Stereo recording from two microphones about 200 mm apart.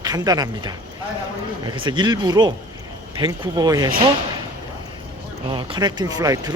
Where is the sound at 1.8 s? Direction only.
20° right (ahead or behind).